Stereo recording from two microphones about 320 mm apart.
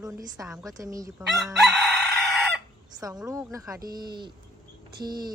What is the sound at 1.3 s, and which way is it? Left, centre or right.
Chicken, centre.